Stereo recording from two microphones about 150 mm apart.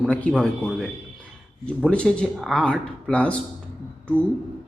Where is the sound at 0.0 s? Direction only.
10° left (ahead or behind).